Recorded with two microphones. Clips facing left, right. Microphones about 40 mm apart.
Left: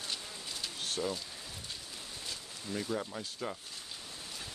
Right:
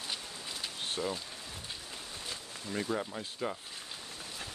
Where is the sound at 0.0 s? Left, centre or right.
Centre.